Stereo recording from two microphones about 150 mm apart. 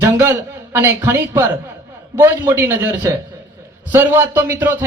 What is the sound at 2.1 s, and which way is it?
Speech, 25° right (ahead or behind).